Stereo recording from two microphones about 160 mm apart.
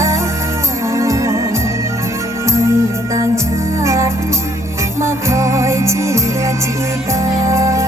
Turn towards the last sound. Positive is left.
turn(degrees=-20)  # may be behind; listen again after turning